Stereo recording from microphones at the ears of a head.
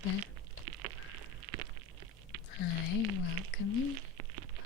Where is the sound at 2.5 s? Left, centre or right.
Left.